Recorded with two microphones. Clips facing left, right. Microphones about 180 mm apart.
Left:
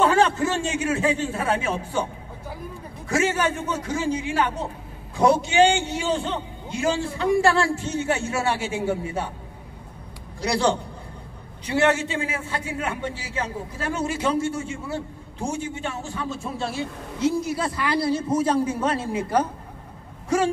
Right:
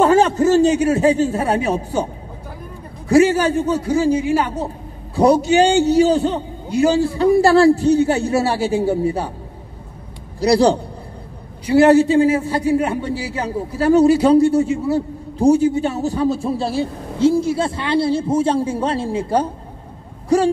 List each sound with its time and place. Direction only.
0.0 s a man's voice: 40° right (ahead or behind)
3.1 s a man's voice: 35° right (ahead or behind)
4.1 s speech: 10° right (ahead or behind)
5.1 s a man's voice: 40° right (ahead or behind)
10.4 s a man's voice: 35° right (ahead or behind)